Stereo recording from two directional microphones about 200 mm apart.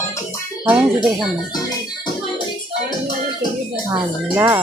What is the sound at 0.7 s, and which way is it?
Speech, 5° right (ahead or behind).